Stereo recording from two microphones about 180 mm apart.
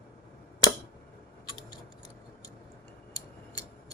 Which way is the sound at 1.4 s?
25° left (ahead or behind).